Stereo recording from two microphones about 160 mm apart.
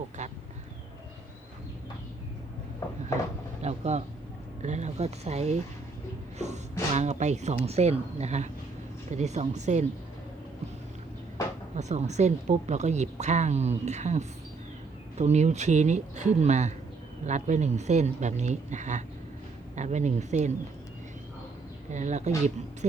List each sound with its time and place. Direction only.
0.2 s duck: 45° right (ahead or behind)
3.6 s a sound: 45° right (ahead or behind)
6.9 s speech: 45° right (ahead or behind)
11.8 s speech: 45° right (ahead or behind)
21.9 s speech: 45° right (ahead or behind)